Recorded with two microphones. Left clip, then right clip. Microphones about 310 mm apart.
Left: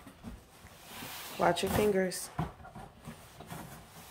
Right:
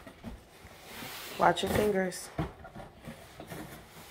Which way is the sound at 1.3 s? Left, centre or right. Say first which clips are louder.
Right 3 dB; centre.